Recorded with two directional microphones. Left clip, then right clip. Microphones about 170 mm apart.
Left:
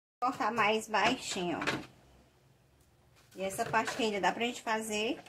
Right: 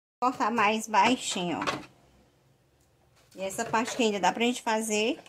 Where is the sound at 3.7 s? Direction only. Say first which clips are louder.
Right 5 dB; 50° right (ahead or behind).